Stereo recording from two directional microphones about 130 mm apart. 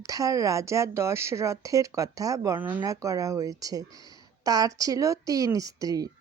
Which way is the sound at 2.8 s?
25° right (ahead or behind).